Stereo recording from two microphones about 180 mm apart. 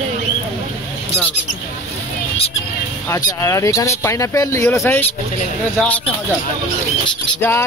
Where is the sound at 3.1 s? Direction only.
20° left (ahead or behind).